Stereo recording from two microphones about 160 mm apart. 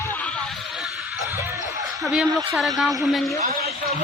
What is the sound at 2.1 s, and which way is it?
A man's voice, 5° right (ahead or behind).